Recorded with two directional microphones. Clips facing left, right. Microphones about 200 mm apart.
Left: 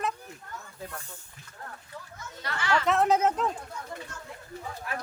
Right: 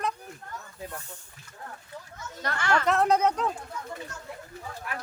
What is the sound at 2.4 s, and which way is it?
Speech, 50° right (ahead or behind).